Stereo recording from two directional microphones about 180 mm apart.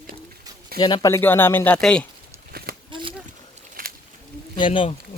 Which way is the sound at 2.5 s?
60° right (ahead or behind).